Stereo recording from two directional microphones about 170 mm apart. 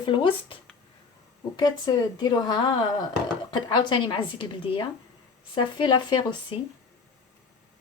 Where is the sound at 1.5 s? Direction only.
25° left (ahead or behind).